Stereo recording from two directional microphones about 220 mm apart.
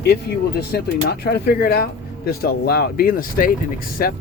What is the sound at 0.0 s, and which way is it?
Speech, 45° left (ahead or behind).